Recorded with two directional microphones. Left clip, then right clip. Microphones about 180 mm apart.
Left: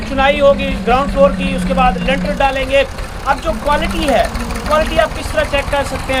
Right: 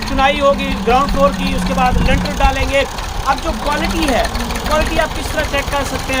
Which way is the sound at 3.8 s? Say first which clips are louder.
Right 1 dB; 45° right (ahead or behind).